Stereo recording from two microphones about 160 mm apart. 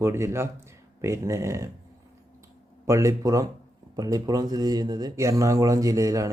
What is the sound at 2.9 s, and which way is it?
A man's voice, 20° right (ahead or behind).